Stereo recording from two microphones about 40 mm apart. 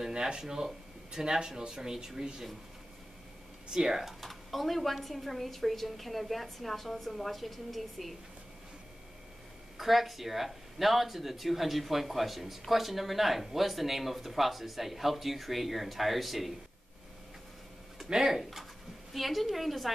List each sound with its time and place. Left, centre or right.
0.0 s speech: centre
3.7 s speech: centre
4.2 s speech: centre
9.8 s speech: centre
17.9 s speech: centre